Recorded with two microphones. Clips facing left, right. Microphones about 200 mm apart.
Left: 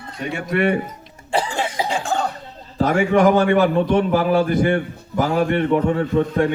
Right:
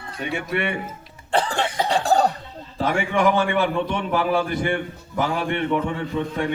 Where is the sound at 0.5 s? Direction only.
40° left (ahead or behind).